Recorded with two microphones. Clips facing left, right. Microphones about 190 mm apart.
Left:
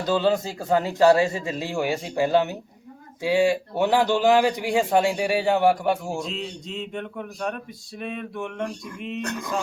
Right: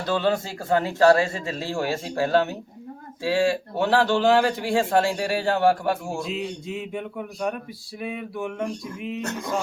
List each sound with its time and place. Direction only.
0.1 s a man's voice: 15° left (ahead or behind)
6.2 s speech: 5° right (ahead or behind)
9.2 s a sound: 25° right (ahead or behind)